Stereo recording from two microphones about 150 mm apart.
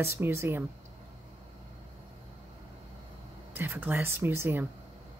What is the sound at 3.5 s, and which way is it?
A woman's voice, 15° right (ahead or behind).